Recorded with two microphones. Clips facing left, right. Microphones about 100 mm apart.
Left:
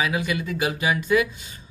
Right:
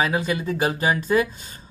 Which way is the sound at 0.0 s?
35° right (ahead or behind).